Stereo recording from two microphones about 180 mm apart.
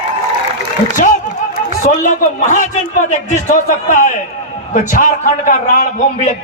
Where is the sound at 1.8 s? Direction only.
45° left (ahead or behind).